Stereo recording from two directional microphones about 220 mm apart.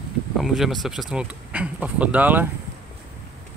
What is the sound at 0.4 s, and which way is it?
Speech, centre (ahead or behind).